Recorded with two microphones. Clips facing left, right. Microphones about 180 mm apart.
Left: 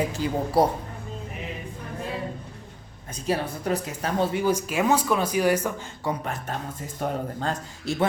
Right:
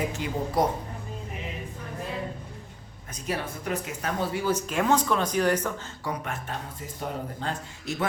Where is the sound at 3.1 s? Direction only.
35° left (ahead or behind).